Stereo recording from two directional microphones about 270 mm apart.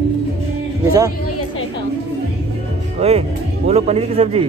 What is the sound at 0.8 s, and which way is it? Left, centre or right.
Speech, centre.